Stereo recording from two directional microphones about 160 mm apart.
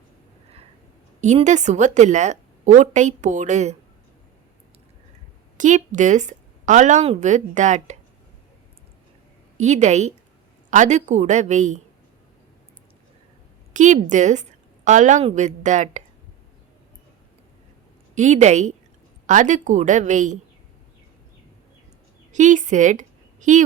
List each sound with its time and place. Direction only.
1.2 s a woman's voice: 45° right (ahead or behind)
5.5 s a woman's voice: 50° right (ahead or behind)
9.6 s a woman's voice: 45° right (ahead or behind)
13.7 s a woman's voice: 50° right (ahead or behind)
18.1 s a woman's voice: 50° right (ahead or behind)
22.3 s a woman's voice: 50° right (ahead or behind)